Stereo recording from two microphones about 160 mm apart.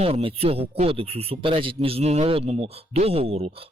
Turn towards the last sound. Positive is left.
turn(degrees=-40)  # may be behind; listen again after turning